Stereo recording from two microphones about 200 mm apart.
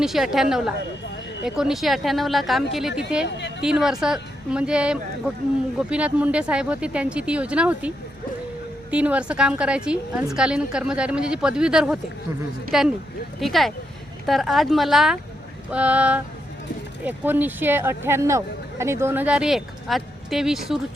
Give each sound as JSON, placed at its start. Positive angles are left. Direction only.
{"t": 0.0, "sound": "a woman's voice", "side_deg": 0}
{"t": 3.2, "sound": "speech", "side_deg": 60}
{"t": 3.6, "sound": "a woman's voice", "side_deg": -5}